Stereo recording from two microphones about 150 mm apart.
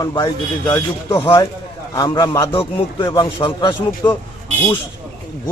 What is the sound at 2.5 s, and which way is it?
Speech, 35° left (ahead or behind).